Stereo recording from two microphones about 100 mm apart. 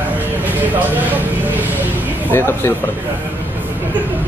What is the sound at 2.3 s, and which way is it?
Speech, 25° left (ahead or behind).